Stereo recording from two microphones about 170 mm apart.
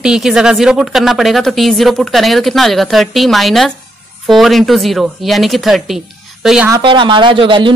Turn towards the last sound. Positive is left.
turn(degrees=-30)  # may be behind; listen again after turning